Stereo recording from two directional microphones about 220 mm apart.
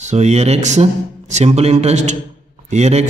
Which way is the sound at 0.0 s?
30° right (ahead or behind).